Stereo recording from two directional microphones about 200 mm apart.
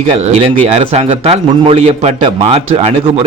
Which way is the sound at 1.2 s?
30° right (ahead or behind).